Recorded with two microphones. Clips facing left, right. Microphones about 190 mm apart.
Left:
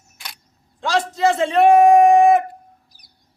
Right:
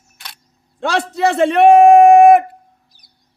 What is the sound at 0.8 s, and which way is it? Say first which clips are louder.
Speech: right 1 dB; 65° right (ahead or behind).